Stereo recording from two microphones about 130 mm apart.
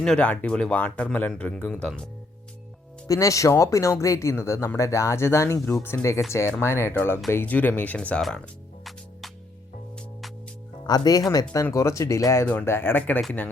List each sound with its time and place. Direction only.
0.0 s speech: 10° left (ahead or behind)
3.1 s speech: 25° left (ahead or behind); by 8.4 s 5° left (ahead or behind)
8.8 s music: centre (ahead or behind)
10.8 s speech: 30° left (ahead or behind); by 13.2 s 15° left (ahead or behind)